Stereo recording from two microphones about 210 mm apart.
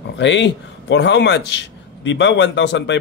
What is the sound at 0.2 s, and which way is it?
A man's voice, 60° left (ahead or behind).